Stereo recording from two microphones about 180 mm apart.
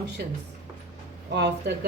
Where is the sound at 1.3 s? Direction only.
70° right (ahead or behind).